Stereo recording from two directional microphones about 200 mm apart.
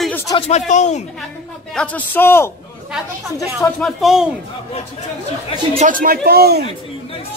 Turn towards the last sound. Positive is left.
turn(degrees=-50)  # may be behind; listen again after turning